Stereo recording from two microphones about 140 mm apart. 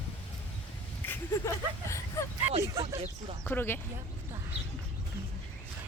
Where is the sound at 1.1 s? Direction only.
20° left (ahead or behind).